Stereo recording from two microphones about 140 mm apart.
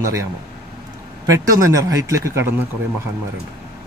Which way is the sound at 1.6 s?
25° right (ahead or behind).